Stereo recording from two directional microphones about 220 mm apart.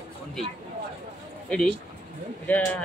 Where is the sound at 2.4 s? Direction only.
5° left (ahead or behind).